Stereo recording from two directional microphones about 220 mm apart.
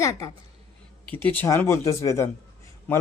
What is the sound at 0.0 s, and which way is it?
A child's voice, 15° left (ahead or behind).